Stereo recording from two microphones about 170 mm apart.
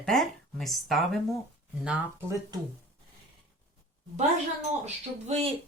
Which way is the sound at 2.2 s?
20° right (ahead or behind).